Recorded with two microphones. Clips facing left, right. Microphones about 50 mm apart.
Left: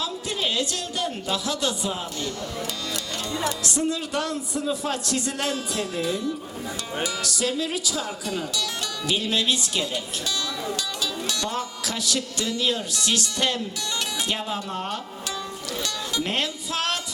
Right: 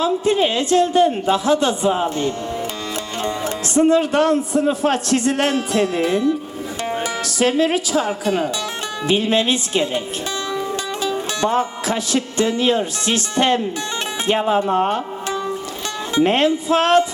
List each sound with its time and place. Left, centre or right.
0.0 s a woman's voice: right
11.0 s a woman's voice: right